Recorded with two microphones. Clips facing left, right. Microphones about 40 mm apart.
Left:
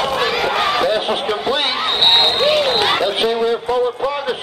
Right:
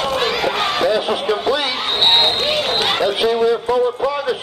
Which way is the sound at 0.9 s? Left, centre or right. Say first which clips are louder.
Even; left.